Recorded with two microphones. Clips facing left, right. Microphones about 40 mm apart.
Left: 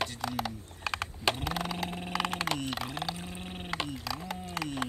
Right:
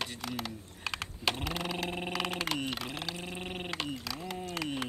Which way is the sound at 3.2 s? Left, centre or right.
Right.